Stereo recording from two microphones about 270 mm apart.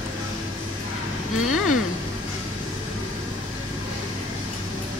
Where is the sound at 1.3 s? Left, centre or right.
Left.